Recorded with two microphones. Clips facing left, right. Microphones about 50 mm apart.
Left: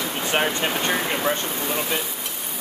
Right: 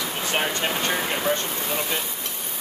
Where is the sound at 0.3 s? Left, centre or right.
Centre.